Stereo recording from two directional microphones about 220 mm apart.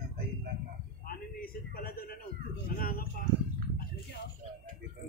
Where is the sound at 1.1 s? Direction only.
40° left (ahead or behind).